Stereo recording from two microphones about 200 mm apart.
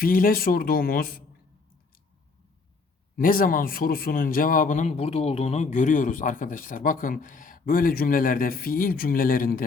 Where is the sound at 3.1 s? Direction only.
45° left (ahead or behind).